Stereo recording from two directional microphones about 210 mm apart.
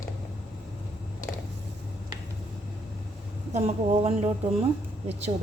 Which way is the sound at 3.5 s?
30° right (ahead or behind).